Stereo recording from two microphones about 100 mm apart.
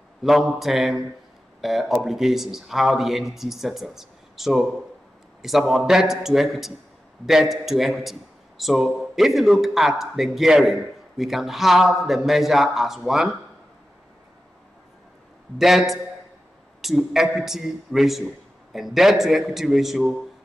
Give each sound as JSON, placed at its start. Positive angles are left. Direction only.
{"t": 0.2, "sound": "a man's voice", "side_deg": 0}
{"t": 15.5, "sound": "a man's voice", "side_deg": 0}